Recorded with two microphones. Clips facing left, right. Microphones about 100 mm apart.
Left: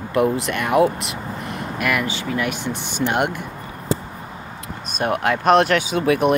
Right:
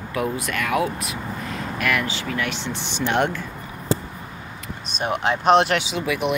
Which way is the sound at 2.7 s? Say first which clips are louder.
Left 1 dB; 50° left (ahead or behind).